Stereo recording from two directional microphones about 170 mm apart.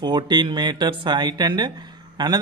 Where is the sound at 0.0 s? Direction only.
25° right (ahead or behind).